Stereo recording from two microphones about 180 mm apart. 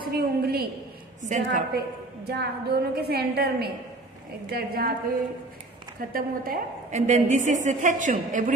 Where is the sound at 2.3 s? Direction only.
65° right (ahead or behind).